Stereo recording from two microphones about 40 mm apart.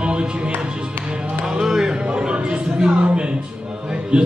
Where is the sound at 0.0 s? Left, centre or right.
Right.